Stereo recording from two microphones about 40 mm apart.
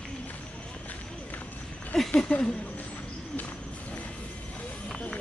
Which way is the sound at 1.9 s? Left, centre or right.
Centre.